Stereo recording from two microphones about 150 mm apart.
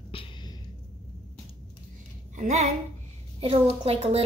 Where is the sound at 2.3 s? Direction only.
55° right (ahead or behind).